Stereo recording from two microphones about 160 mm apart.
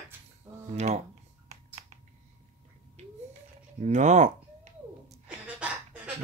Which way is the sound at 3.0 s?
45° right (ahead or behind).